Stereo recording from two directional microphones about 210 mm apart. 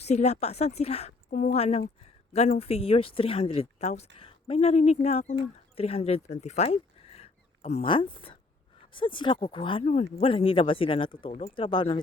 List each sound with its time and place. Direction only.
0.0 s a woman's voice: 30° left (ahead or behind)